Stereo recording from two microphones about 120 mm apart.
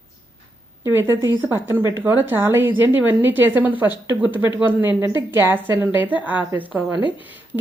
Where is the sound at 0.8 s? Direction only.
20° right (ahead or behind).